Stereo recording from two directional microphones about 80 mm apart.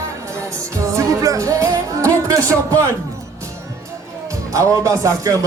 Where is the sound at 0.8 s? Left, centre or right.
Right.